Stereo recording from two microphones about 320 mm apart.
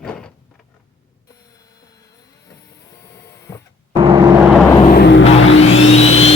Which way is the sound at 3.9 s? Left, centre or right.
Centre.